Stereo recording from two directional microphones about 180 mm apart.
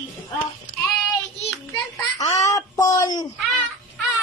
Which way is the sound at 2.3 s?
20° left (ahead or behind).